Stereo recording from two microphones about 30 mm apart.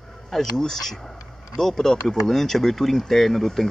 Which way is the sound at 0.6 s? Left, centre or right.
Centre.